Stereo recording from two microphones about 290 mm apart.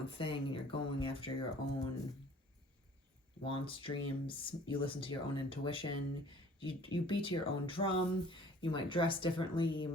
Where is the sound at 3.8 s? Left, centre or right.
Centre.